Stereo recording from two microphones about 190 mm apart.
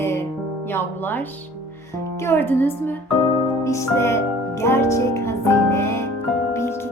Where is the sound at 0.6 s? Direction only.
10° left (ahead or behind).